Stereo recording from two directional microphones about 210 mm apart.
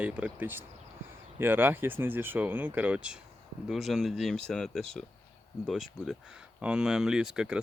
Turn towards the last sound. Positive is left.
turn(degrees=-5)  # may be behind; listen again after turning